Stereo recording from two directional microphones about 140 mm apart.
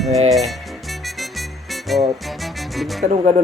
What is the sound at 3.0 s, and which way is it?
Speech, 60° right (ahead or behind).